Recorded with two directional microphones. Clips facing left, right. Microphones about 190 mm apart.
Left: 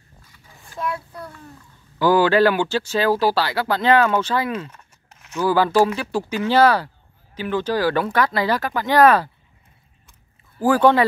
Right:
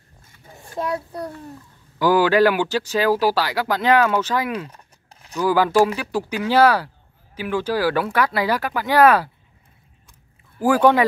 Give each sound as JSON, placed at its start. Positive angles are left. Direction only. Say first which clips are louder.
{"t": 0.3, "sound": "a sound", "louder": "right 7 dB", "side_deg": -40}
{"t": 2.0, "sound": "speech", "louder": "even", "side_deg": -10}
{"t": 4.6, "sound": "crumpling", "louder": "right 1 dB", "side_deg": -35}
{"t": 5.4, "sound": "speech", "louder": "even", "side_deg": -10}
{"t": 10.6, "sound": "speech", "louder": "even", "side_deg": -10}